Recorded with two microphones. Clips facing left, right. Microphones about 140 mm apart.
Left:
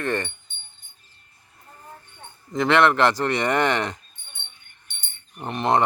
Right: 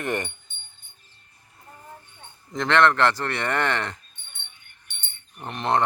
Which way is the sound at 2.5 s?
10° left (ahead or behind).